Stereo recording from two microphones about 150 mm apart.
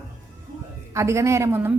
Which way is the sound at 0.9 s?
20° right (ahead or behind).